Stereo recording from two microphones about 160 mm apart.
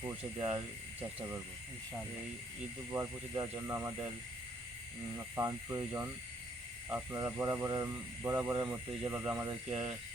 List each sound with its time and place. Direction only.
0.3 s speech: 25° right (ahead or behind)
2.9 s speech: 25° right (ahead or behind)
5.1 s speech: 20° right (ahead or behind)